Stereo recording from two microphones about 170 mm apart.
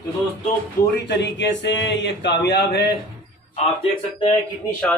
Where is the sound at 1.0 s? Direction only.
90° left.